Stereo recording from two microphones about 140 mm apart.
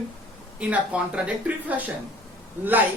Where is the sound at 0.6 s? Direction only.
10° right (ahead or behind).